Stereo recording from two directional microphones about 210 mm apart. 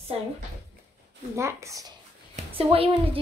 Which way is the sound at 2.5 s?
25° right (ahead or behind).